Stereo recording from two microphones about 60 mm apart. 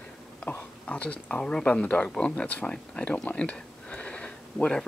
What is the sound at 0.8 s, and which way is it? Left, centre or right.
Speech, left.